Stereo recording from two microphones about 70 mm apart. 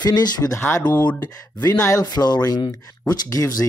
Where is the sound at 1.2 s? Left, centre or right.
Left.